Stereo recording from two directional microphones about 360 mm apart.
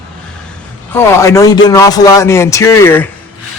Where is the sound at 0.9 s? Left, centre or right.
Centre.